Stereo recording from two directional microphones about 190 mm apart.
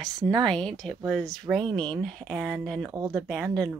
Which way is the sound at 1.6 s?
25° right (ahead or behind).